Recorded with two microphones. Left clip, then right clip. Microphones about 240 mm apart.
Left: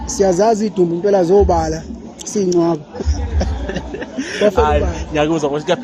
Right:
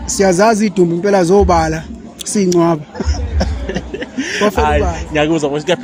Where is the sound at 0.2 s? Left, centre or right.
Right.